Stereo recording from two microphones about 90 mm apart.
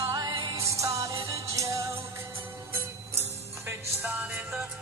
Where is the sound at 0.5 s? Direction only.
35° right (ahead or behind).